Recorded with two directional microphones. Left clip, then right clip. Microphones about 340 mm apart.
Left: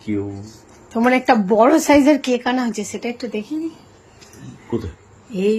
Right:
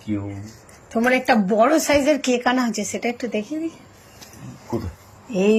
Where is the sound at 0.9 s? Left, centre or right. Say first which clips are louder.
Left 3 dB; centre.